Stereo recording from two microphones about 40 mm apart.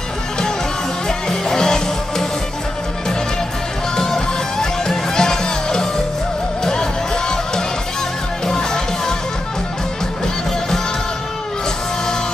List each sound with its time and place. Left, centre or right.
1.0 s music: centre
3.9 s music: centre